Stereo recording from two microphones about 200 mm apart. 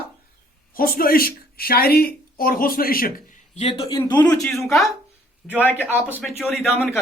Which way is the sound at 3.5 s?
30° left (ahead or behind).